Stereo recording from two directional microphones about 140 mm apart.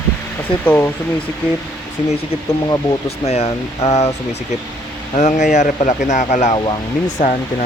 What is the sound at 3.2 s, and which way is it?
Speech, 45° left (ahead or behind).